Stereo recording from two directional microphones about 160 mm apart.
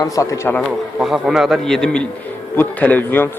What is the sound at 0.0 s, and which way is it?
Speech, 20° left (ahead or behind).